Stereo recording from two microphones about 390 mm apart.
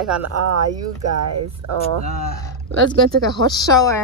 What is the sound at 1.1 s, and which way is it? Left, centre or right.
Speech, right.